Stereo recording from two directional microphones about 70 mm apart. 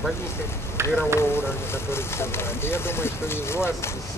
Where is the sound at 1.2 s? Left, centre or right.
Left.